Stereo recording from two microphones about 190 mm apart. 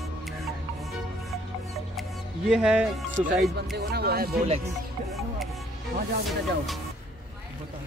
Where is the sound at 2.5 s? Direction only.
5° right (ahead or behind).